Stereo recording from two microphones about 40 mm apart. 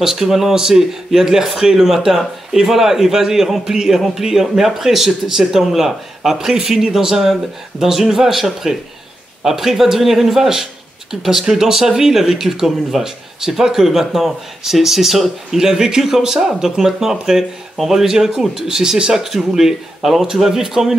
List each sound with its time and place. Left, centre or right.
0.0 s speech: centre